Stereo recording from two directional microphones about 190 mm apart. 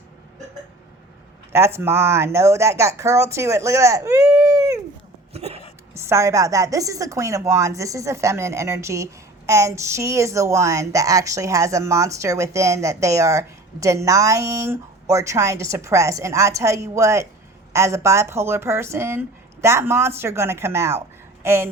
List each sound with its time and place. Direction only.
1.5 s a woman's voice: 15° right (ahead or behind)
5.3 s a sound: 35° right (ahead or behind)
5.9 s a woman's voice: 15° right (ahead or behind)